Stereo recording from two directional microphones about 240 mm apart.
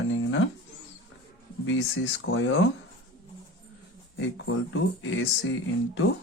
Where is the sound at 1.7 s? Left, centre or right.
Left.